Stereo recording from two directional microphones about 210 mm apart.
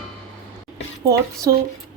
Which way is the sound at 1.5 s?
15° right (ahead or behind).